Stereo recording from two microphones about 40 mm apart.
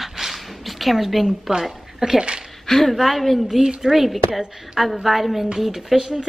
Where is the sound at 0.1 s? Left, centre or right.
Centre.